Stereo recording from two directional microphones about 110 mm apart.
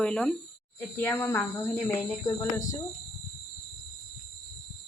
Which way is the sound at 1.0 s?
20° left (ahead or behind).